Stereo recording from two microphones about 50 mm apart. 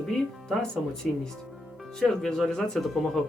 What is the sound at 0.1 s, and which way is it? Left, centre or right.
Speech, centre.